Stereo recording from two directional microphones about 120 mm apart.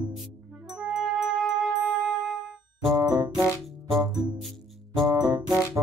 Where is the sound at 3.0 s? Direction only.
30° right (ahead or behind).